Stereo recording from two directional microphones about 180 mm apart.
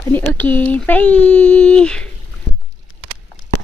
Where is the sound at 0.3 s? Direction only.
10° left (ahead or behind).